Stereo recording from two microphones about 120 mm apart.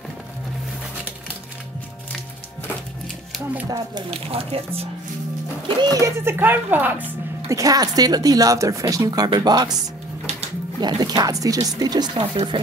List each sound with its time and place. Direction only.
3.6 s speech: 30° right (ahead or behind)
4.1 s speech: 55° right (ahead or behind)
5.8 s speech: 30° right (ahead or behind)
6.3 s speech: 15° right (ahead or behind)
7.4 s speech: 30° right (ahead or behind)
10.8 s speech: 35° right (ahead or behind)
12.2 s speech: 50° right (ahead or behind)